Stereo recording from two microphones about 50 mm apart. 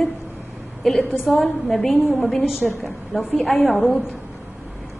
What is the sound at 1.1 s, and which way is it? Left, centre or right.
A woman's voice, centre.